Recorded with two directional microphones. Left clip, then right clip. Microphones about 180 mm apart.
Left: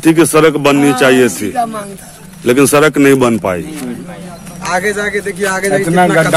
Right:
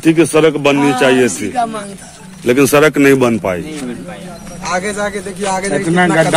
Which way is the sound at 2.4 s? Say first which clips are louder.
Left 1 dB; 10° left (ahead or behind).